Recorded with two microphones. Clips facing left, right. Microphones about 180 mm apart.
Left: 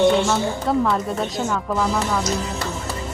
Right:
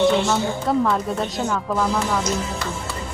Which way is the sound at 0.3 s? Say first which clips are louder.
Even; centre (ahead or behind).